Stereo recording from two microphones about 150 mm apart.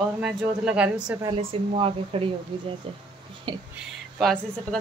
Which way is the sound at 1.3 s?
40° right (ahead or behind).